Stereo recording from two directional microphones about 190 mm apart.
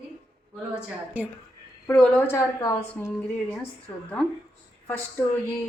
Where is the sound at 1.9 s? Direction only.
10° left (ahead or behind).